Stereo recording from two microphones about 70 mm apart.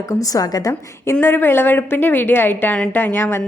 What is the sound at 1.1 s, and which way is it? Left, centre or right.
A woman's voice, left.